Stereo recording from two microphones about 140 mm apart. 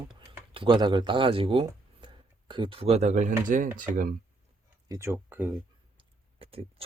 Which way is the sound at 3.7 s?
70° right (ahead or behind).